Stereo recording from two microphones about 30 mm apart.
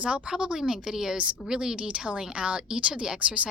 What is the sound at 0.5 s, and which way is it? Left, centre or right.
A woman's voice, right.